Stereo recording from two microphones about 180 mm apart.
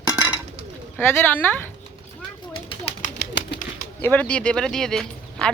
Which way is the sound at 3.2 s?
75° left (ahead or behind).